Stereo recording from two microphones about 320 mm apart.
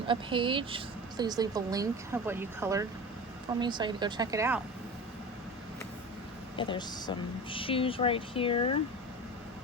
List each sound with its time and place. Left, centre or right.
0.1 s speech: centre
6.6 s speech: centre